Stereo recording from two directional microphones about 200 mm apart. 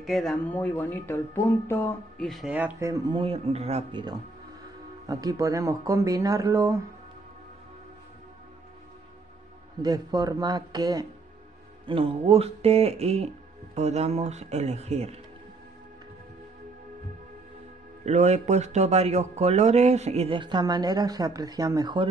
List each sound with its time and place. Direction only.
0.0 s speech: centre (ahead or behind); by 4.0 s 30° right (ahead or behind)
5.0 s speech: 20° right (ahead or behind)
9.8 s a man's voice: 20° right (ahead or behind)
18.0 s speech: 35° right (ahead or behind); by 22.0 s 20° right (ahead or behind)